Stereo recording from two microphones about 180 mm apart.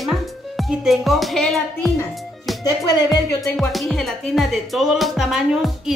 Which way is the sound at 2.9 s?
20° left (ahead or behind).